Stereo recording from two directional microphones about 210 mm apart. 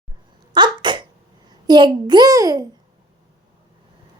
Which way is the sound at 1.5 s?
20° right (ahead or behind).